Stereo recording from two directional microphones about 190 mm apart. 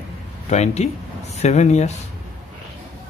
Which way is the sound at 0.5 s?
35° left (ahead or behind).